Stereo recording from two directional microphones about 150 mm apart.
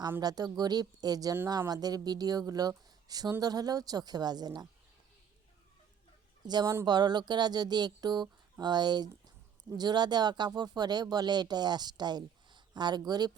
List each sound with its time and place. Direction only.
0.2 s speech: 25° right (ahead or behind)
6.5 s speech: 25° right (ahead or behind)